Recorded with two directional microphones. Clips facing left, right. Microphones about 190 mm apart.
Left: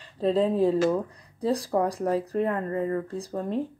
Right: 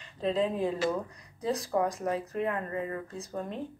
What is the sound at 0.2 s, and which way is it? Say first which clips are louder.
Speech: left 6 dB; 35° left (ahead or behind).